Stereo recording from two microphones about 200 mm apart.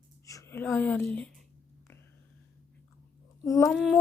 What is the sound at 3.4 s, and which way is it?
Speech, 15° left (ahead or behind).